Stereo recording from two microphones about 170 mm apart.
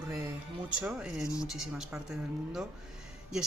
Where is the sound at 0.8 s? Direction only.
5° right (ahead or behind).